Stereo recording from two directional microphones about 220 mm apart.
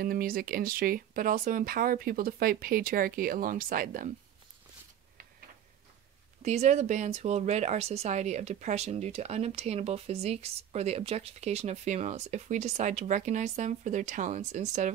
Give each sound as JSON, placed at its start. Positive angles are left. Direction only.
{"t": 0.0, "sound": "speech", "side_deg": -40}
{"t": 6.4, "sound": "speech", "side_deg": -30}